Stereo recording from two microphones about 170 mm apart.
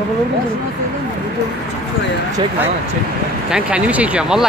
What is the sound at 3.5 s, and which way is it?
Speech, 5° right (ahead or behind).